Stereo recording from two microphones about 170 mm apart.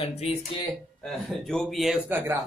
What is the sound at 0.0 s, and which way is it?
Speech, 40° left (ahead or behind).